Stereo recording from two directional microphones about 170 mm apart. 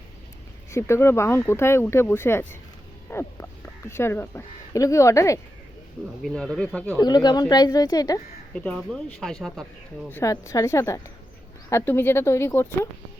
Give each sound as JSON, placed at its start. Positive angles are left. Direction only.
{"t": 0.7, "sound": "speech", "side_deg": 15}
{"t": 6.2, "sound": "speech", "side_deg": 5}
{"t": 7.0, "sound": "speech", "side_deg": 25}
{"t": 8.5, "sound": "speech", "side_deg": 5}
{"t": 10.1, "sound": "speech", "side_deg": 15}